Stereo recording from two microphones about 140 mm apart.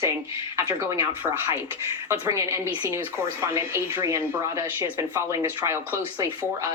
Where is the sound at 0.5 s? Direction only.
20° right (ahead or behind).